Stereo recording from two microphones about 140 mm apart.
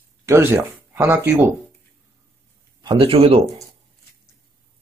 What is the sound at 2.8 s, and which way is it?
Speech, 40° right (ahead or behind).